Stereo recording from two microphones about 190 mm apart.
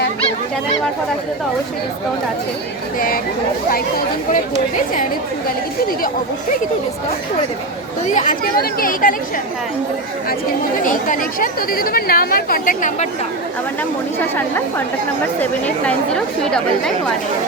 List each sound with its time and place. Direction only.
3.7 s a woman's voice: 50° left (ahead or behind)
8.1 s a woman's voice: 45° left (ahead or behind)
10.8 s a woman's voice: 45° left (ahead or behind)
15.4 s speech: 5° left (ahead or behind)